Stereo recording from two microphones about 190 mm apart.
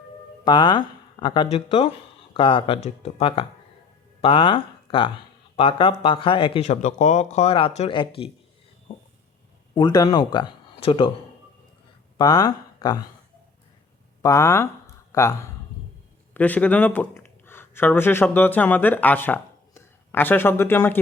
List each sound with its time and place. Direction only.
0.4 s speech: 25° left (ahead or behind)
9.7 s speech: 20° left (ahead or behind)
12.1 s speech: 20° left (ahead or behind)
14.2 s speech: 15° left (ahead or behind)